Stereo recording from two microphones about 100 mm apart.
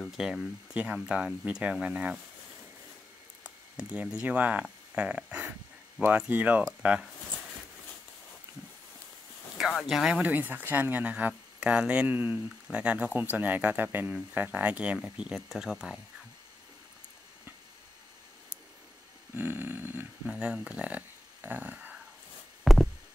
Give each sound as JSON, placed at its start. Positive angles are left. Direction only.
{"t": 0.0, "sound": "speech", "side_deg": -5}
{"t": 3.4, "sound": "speech", "side_deg": -15}
{"t": 9.6, "sound": "speech", "side_deg": 0}
{"t": 10.2, "sound": "speech", "side_deg": -20}
{"t": 19.3, "sound": "a sound", "side_deg": -20}
{"t": 20.3, "sound": "speech", "side_deg": -10}
{"t": 22.6, "sound": "a sound", "side_deg": 0}